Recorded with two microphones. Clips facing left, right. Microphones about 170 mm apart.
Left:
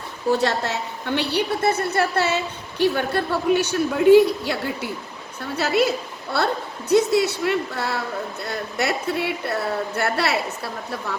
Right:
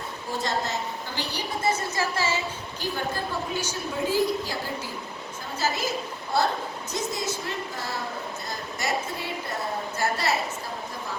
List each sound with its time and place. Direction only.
0.3 s a woman's voice: 70° left (ahead or behind)